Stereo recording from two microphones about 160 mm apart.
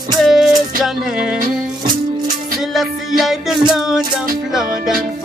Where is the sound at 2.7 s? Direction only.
Centre (ahead or behind).